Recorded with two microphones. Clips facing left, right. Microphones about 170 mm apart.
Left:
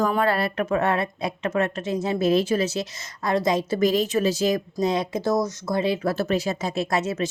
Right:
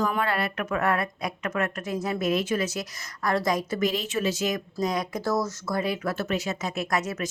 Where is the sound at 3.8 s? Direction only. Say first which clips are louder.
Left 6 dB; 40° left (ahead or behind).